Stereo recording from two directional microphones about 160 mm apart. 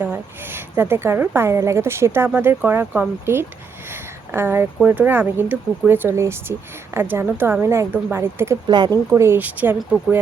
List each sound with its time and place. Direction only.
0.0 s speech: 15° right (ahead or behind)
8.6 s speech: 25° right (ahead or behind)
9.0 s speech: 15° right (ahead or behind)